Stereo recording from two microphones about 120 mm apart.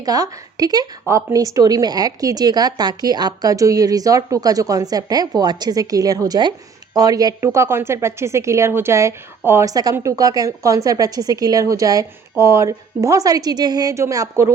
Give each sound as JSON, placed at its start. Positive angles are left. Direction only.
{"t": 0.0, "sound": "a woman's voice", "side_deg": -30}